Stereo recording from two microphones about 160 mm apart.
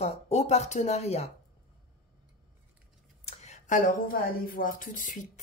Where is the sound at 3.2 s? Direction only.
45° left (ahead or behind).